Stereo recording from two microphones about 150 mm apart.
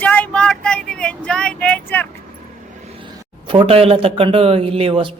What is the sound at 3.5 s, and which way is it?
A man's voice, 40° right (ahead or behind).